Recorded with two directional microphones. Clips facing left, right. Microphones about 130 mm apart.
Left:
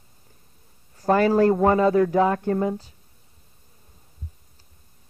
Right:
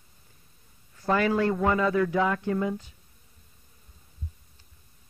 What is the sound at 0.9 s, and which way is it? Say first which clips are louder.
Speech: left 6 dB; 40° left (ahead or behind).